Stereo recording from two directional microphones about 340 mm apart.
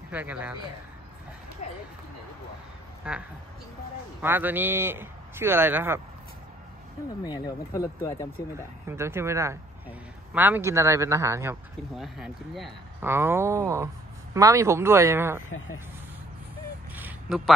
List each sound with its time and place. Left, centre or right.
0.1 s speech: centre
1.6 s a sound: centre
3.1 s a man's voice: centre
7.2 s speech: centre
8.5 s a man's voice: centre
16.9 s a sound: centre